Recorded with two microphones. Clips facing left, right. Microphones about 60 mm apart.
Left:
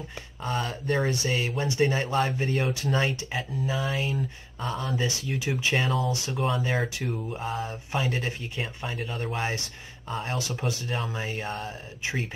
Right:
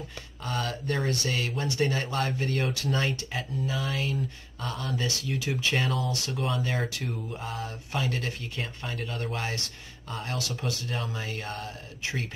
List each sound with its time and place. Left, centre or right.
0.4 s speech: left
5.8 s speech: centre
6.0 s speech: left